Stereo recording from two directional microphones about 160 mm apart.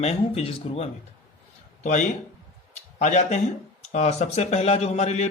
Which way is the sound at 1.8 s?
50° left (ahead or behind).